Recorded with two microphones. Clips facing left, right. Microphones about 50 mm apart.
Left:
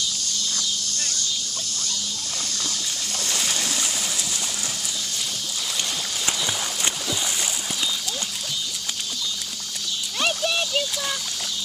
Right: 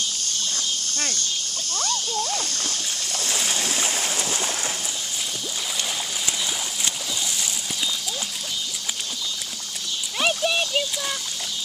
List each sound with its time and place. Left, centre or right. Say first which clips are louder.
0.0 s insect: even; right
3.3 s splash: right 1 dB; centre
3.6 s boat: right 2 dB; right
6.2 s a sound: left 5 dB; left
10.1 s splash: right 2 dB; centre